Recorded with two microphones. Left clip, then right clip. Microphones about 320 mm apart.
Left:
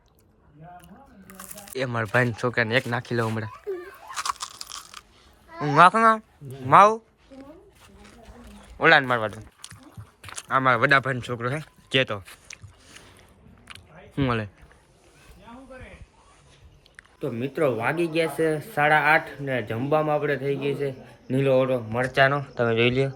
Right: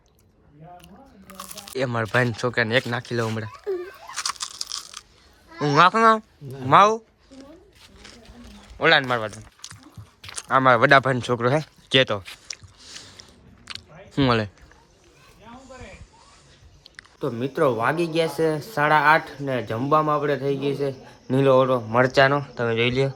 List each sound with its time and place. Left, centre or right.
1.7 s speech: centre
4.1 s crunch: centre
5.5 s speech: centre
8.8 s speech: centre
11.6 s a sound: centre
13.7 s chewing: centre
16.8 s speech: centre
22.2 s speech: centre